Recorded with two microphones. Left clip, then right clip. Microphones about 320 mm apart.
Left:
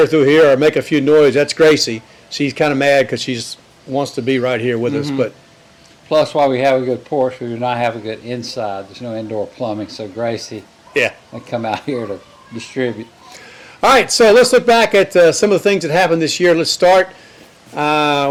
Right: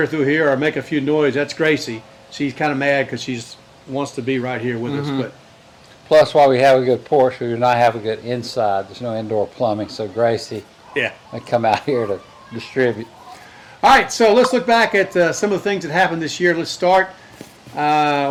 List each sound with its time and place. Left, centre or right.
0.1 s speech: left
6.1 s speech: centre
13.9 s speech: left